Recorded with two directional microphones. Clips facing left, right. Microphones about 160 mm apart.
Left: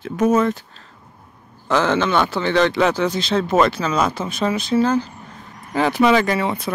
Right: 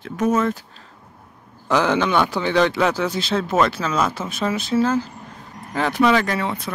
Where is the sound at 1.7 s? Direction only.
10° right (ahead or behind).